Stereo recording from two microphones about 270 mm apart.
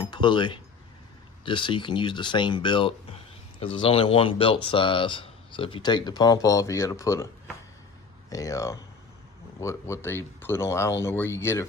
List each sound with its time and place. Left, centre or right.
0.1 s speech: centre
8.3 s speech: centre